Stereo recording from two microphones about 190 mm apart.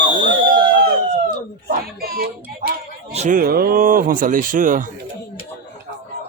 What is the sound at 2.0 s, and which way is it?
Speech, 50° right (ahead or behind).